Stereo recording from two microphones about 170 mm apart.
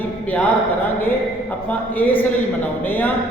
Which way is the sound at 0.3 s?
10° left (ahead or behind).